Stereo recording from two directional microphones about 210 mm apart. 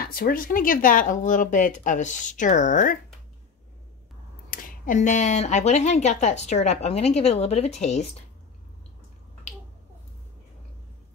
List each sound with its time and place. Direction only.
0.0 s speech: 45° left (ahead or behind)
4.5 s speech: 40° left (ahead or behind)